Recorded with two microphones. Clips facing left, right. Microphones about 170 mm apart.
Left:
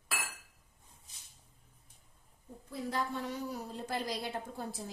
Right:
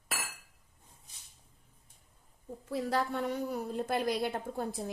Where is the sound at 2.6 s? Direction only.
80° right.